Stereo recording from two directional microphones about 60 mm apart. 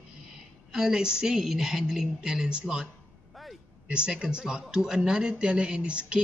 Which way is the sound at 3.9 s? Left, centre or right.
Centre.